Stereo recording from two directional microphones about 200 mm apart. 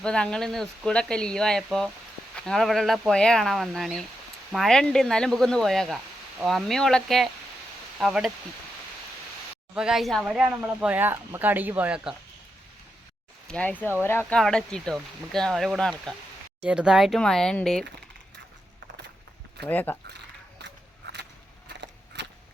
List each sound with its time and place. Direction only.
0.0 s speech: 5° left (ahead or behind)
9.7 s speech: 5° right (ahead or behind)
13.5 s speech: 5° left (ahead or behind)
19.6 s speech: 10° left (ahead or behind)
20.6 s scissors: 60° right (ahead or behind)
21.7 s a sound: 60° right (ahead or behind)